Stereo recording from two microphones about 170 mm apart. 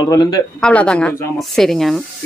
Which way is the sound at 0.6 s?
5° left (ahead or behind).